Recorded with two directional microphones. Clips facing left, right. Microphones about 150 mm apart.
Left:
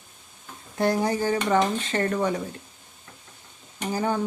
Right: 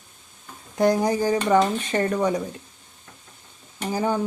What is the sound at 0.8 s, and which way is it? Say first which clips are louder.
Speech: right 3 dB; 15° right (ahead or behind).